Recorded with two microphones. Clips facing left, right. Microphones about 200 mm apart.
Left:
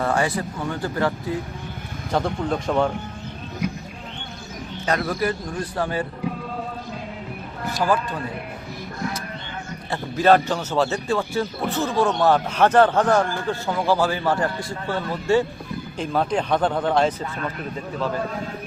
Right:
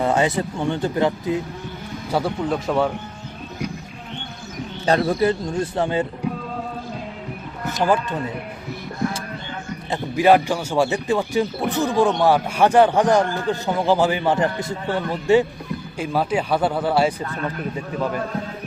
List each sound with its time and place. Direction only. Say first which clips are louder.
0.0 s speech: right 3 dB; 20° right (ahead or behind)
2.1 s speech: right 1 dB; 5° right (ahead or behind)
4.9 s speech: right 5 dB; 30° right (ahead or behind)
7.7 s speech: right 2 dB; 20° right (ahead or behind)
9.9 s speech: right 2 dB; 15° right (ahead or behind)